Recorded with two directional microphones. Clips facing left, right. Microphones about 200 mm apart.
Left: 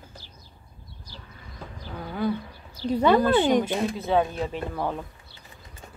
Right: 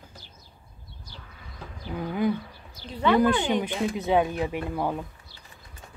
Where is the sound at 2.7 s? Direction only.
40° left (ahead or behind).